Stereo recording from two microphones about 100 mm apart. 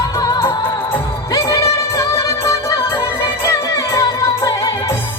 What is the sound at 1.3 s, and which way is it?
Music, 35° left (ahead or behind).